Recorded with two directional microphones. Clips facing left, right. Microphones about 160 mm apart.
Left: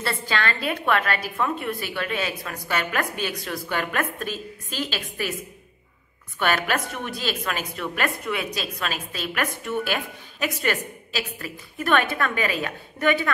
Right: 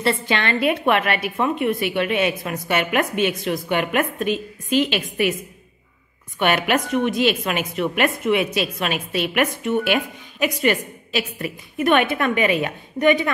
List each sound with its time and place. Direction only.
0.0 s a woman's voice: 20° right (ahead or behind)
6.4 s a woman's voice: 20° right (ahead or behind)